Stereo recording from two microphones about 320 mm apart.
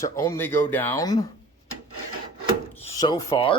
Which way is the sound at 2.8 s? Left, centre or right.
Centre.